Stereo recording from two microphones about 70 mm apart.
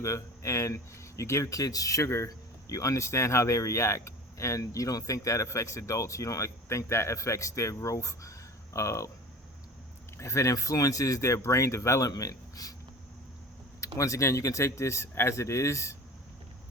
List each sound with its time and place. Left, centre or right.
0.0 s speech: left
10.2 s speech: left
13.8 s speech: left